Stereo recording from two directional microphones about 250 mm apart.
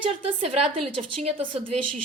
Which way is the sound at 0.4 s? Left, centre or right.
Right.